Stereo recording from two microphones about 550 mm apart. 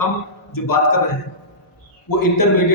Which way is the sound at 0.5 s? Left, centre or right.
Left.